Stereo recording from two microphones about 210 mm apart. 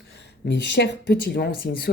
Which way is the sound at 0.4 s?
55° left (ahead or behind).